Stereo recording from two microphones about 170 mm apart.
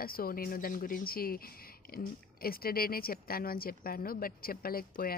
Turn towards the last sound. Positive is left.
turn(degrees=60)  # may be behind; listen again after turning